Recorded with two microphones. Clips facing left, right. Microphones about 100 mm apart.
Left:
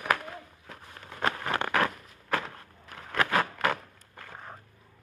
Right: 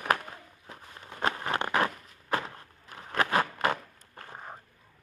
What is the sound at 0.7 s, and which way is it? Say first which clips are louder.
Walk: right 3 dB; 20° right (ahead or behind).